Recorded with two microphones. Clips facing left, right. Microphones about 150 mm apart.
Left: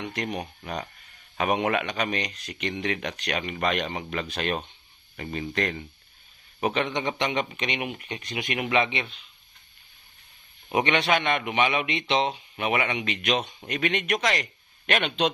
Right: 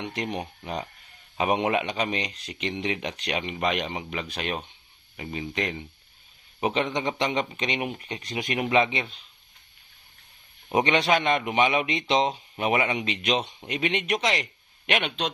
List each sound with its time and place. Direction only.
0.0 s speech: 25° right (ahead or behind)
6.6 s speech: 25° right (ahead or behind)
10.7 s speech: 30° right (ahead or behind)
14.8 s speech: 15° right (ahead or behind)